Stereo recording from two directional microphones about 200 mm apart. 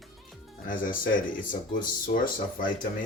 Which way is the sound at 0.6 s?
45° left (ahead or behind).